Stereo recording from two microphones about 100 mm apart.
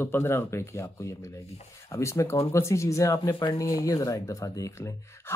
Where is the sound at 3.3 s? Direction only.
55° left (ahead or behind).